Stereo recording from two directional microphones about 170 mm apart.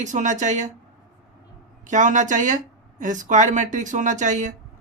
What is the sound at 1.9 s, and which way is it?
Speech, 45° right (ahead or behind).